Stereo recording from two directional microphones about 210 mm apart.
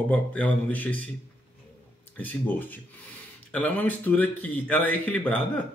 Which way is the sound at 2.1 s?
10° left (ahead or behind).